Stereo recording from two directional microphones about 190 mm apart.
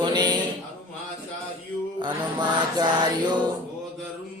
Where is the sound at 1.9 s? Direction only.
25° right (ahead or behind).